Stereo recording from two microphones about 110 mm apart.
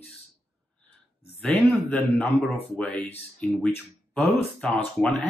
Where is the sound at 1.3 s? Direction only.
15° left (ahead or behind).